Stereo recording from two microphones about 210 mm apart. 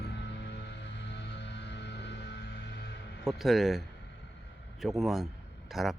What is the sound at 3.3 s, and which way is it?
Speech, centre (ahead or behind).